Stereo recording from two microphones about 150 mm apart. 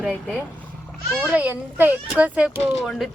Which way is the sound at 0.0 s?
10° right (ahead or behind).